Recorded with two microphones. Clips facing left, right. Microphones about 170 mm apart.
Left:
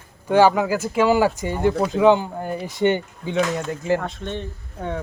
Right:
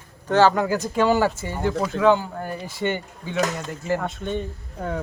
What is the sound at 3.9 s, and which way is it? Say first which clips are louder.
Speech: even; 5° right (ahead or behind).